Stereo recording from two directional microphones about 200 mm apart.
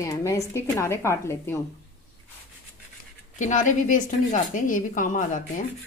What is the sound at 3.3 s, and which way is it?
A woman's voice, 40° left (ahead or behind).